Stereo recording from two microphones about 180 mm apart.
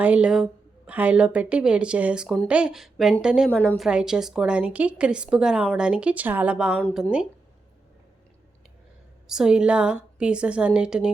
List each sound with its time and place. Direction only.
0.0 s a woman's voice: 5° right (ahead or behind)
9.2 s a woman's voice: 5° right (ahead or behind)